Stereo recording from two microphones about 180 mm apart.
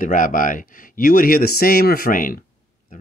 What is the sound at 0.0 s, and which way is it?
Speech, 50° left (ahead or behind).